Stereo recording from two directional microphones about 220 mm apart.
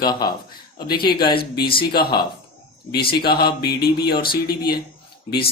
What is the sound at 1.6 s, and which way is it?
Speech, 25° left (ahead or behind).